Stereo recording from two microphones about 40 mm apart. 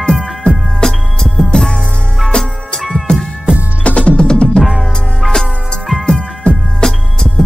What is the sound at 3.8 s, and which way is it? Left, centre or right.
Music, left.